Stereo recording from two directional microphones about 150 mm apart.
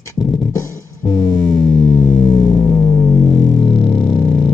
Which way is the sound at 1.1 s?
5° left (ahead or behind).